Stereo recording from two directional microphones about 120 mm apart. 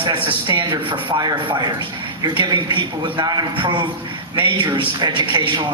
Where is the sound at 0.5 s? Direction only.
45° right (ahead or behind).